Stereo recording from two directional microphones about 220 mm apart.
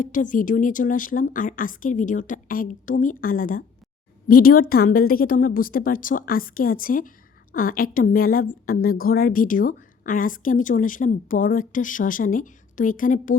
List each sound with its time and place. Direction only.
0.0 s a woman's voice: 35° left (ahead or behind)